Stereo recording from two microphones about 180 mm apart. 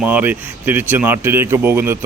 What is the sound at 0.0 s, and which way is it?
Speech, 10° right (ahead or behind).